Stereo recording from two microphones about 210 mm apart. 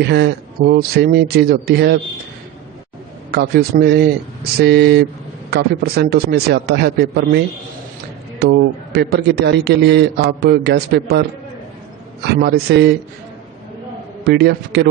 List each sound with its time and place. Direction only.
0.0 s a man's voice: 50° right (ahead or behind)
3.3 s a man's voice: 50° right (ahead or behind)
12.4 s a man's voice: 50° right (ahead or behind)
14.2 s a man's voice: 50° right (ahead or behind)